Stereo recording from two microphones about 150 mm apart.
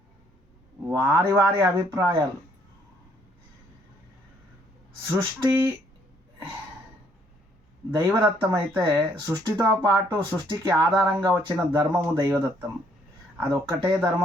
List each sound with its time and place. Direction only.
0.9 s speech: 20° right (ahead or behind)
5.0 s speech: 15° right (ahead or behind)
7.9 s speech: 20° right (ahead or behind)